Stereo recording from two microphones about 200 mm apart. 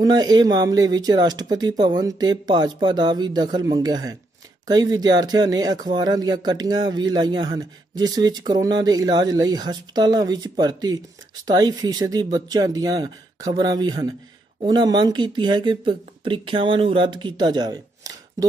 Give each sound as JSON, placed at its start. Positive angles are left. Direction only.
{"t": 0.0, "sound": "speech", "side_deg": -20}